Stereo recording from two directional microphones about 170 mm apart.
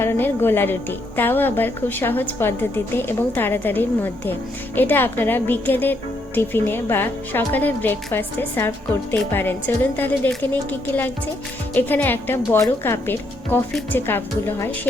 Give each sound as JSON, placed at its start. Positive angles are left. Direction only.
{"t": 0.0, "sound": "a woman's voice", "side_deg": 15}